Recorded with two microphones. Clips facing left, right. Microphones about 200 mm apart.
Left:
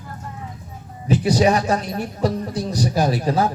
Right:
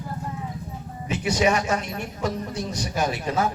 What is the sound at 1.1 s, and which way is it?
Speech, 35° left (ahead or behind).